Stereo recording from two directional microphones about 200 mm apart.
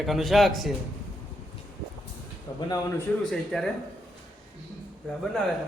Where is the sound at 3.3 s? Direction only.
Centre (ahead or behind).